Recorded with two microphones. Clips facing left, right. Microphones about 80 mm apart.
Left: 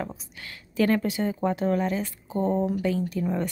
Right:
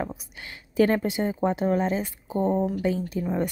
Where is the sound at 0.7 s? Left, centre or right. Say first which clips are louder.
Right 2 dB; right.